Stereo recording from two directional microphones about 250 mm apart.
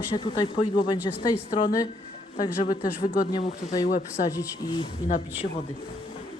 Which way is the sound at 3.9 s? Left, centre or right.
Left.